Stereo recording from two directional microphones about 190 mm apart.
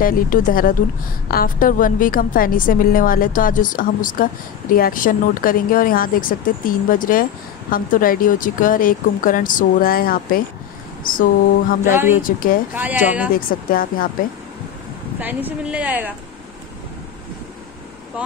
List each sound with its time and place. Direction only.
0.0 s a woman's voice: 50° left (ahead or behind)
11.9 s speech: 10° right (ahead or behind)
12.2 s a woman's voice: 45° left (ahead or behind)
12.7 s speech: 10° right (ahead or behind)
13.3 s a woman's voice: 50° left (ahead or behind)
15.1 s speech: 10° right (ahead or behind)